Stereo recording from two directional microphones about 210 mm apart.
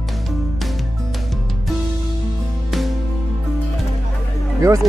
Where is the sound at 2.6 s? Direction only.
Centre (ahead or behind).